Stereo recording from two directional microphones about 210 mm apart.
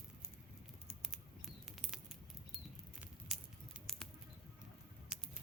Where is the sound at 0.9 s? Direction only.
Centre (ahead or behind).